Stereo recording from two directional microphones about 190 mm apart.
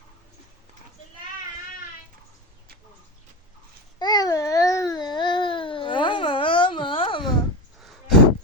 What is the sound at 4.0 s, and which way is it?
Babbling, 20° left (ahead or behind).